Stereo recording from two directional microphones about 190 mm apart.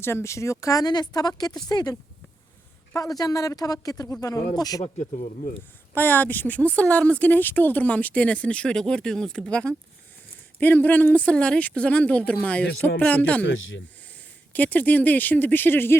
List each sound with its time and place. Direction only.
0.0 s speech: 15° left (ahead or behind)
4.8 s speech: 35° left (ahead or behind)
5.9 s speech: 10° left (ahead or behind)
13.4 s speech: 90° left
14.5 s speech: 10° left (ahead or behind)